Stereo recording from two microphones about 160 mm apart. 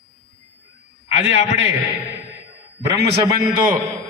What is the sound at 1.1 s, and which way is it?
Speech, 40° left (ahead or behind).